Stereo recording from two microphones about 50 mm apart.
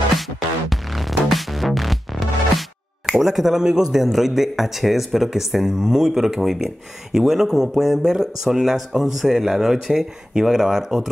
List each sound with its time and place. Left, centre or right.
0.1 s music: centre
3.2 s speech: centre